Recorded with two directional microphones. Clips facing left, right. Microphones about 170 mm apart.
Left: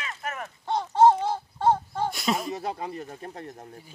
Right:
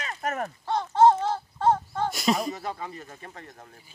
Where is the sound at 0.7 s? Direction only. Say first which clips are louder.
Even; 15° left (ahead or behind).